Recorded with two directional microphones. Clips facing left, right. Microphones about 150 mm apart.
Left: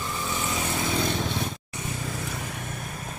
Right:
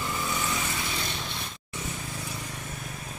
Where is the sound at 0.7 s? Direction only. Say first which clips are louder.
Left 7 dB; 50° left (ahead or behind).